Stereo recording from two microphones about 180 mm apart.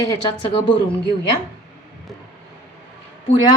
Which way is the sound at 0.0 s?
30° left (ahead or behind).